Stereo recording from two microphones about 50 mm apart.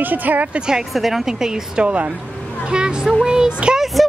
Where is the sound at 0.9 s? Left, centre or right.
Centre.